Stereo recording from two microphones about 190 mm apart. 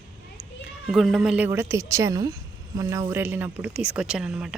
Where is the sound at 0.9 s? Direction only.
Centre (ahead or behind).